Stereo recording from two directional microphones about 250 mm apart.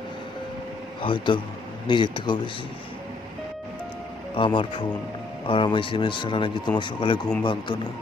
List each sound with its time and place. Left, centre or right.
1.0 s speech: centre
4.4 s speech: centre